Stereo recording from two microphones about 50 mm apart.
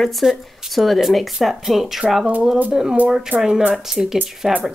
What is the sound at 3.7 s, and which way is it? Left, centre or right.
Speech, centre.